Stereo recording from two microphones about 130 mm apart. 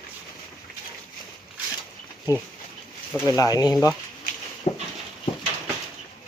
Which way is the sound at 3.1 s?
20° left (ahead or behind).